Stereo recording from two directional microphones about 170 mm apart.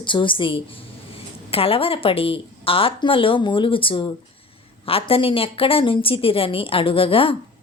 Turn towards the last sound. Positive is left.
turn(degrees=30)  # may be behind; listen again after turning